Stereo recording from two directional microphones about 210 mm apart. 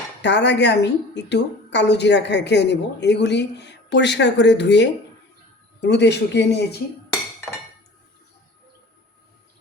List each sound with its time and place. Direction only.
0.2 s a woman's voice: 55° left (ahead or behind)